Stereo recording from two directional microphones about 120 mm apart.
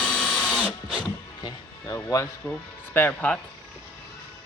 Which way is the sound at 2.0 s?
25° left (ahead or behind).